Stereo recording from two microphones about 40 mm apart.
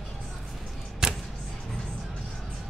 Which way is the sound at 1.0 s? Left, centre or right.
Centre.